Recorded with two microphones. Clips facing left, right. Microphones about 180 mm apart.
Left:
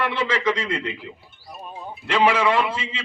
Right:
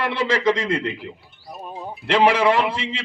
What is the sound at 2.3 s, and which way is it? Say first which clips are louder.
Speech: right 1 dB; 35° right (ahead or behind).